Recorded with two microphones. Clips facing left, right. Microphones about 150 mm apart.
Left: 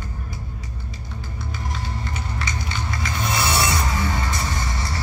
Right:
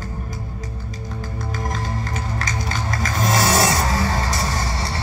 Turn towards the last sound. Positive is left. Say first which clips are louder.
# right 3 dB
turn(degrees=-30)  # may be behind; listen again after turning